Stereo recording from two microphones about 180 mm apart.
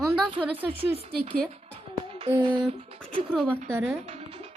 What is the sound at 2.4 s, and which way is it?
Speech, 25° right (ahead or behind).